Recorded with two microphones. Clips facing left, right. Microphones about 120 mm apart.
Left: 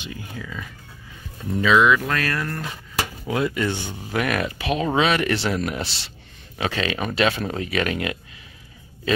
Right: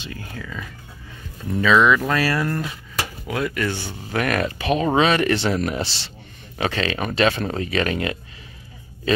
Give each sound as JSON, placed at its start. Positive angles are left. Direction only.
{"t": 0.0, "sound": "speech", "side_deg": 15}
{"t": 1.6, "sound": "speech", "side_deg": 5}
{"t": 2.0, "sound": "speech", "side_deg": -5}
{"t": 3.3, "sound": "speech", "side_deg": 20}
{"t": 4.2, "sound": "speech", "side_deg": 5}